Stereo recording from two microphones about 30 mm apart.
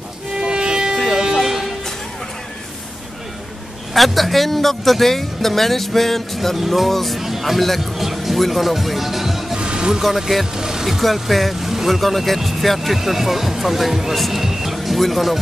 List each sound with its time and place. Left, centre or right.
0.4 s music: right
1.1 s music: centre
3.9 s speech: centre
6.5 s speech: centre
7.2 s speech: centre
9.6 s music: right
10.0 s speech: centre
10.9 s speech: centre
11.6 s vehicle: centre
12.0 s speech: centre
14.4 s music: centre
15.0 s speech: centre